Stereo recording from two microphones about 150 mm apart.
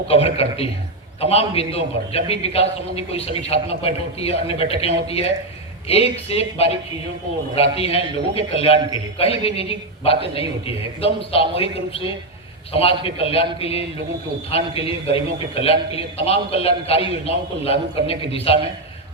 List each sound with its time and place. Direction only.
0.1 s a man's voice: 40° left (ahead or behind)